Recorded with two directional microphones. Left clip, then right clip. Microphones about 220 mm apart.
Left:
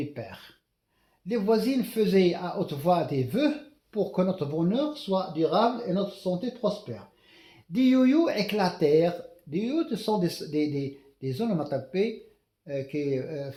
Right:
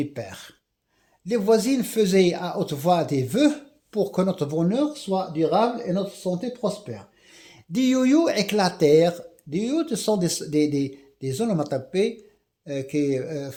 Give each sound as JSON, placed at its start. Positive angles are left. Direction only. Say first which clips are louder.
{"t": 0.1, "sound": "speech", "louder": "right 5 dB", "side_deg": -45}
{"t": 7.7, "sound": "speech", "louder": "right 2 dB", "side_deg": -50}